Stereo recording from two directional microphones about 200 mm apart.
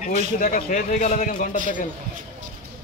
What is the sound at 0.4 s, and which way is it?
A man's voice, 45° left (ahead or behind).